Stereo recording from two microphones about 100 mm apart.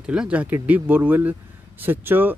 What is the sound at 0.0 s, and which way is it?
Speech, 10° right (ahead or behind).